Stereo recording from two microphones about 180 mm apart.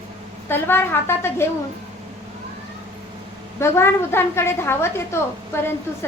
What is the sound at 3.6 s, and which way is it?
A woman's voice, 15° left (ahead or behind).